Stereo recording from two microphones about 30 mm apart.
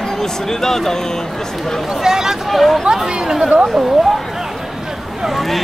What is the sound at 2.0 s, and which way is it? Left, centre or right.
Speech, centre.